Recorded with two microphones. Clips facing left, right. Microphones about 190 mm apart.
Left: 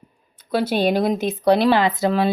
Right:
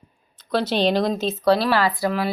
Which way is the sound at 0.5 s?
10° left (ahead or behind).